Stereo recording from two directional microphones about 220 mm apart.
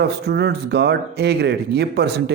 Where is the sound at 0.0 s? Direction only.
50° right (ahead or behind).